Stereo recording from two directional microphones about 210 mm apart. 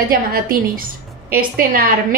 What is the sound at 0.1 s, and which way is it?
A woman's voice, 45° right (ahead or behind).